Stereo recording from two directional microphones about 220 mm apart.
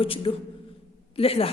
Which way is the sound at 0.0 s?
25° left (ahead or behind).